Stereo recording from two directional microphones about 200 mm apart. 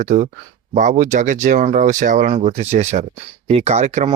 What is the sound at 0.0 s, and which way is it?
Speech, 35° right (ahead or behind).